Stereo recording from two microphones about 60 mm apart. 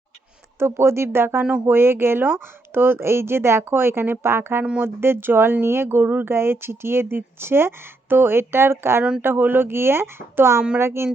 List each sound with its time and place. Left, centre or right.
0.6 s speech: right